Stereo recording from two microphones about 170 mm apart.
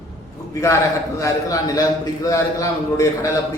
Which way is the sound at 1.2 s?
20° left (ahead or behind).